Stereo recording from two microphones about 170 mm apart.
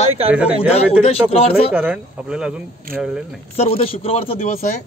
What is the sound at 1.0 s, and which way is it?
Speech, 35° left (ahead or behind).